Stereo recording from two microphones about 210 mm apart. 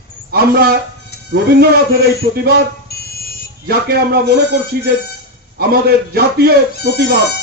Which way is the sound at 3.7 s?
50° right (ahead or behind).